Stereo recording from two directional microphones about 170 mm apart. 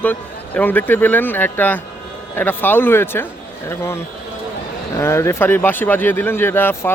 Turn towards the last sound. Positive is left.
turn(degrees=15)  # may be behind; listen again after turning